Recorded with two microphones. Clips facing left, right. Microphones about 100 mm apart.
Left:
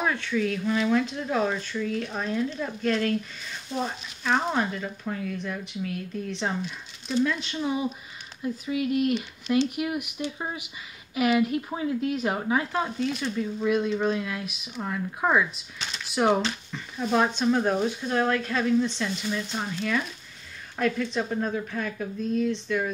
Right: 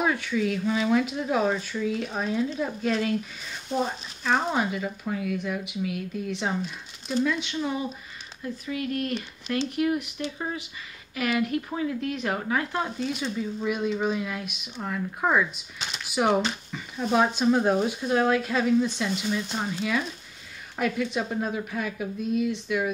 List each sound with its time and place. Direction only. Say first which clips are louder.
0.0 s speech: right 1 dB; 5° right (ahead or behind)
4.2 s speech: even; 5° right (ahead or behind)
8.4 s speech: left 3 dB; 15° left (ahead or behind)
12.7 s speech: left 1 dB; centre (ahead or behind)